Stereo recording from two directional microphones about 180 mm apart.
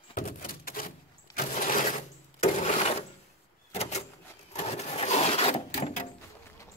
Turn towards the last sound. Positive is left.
turn(degrees=35)  # may be behind; listen again after turning